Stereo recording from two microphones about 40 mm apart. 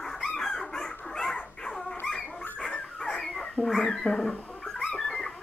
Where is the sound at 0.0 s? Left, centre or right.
Centre.